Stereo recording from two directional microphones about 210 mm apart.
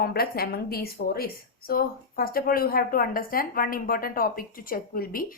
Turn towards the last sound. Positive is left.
turn(degrees=45)  # may be behind; listen again after turning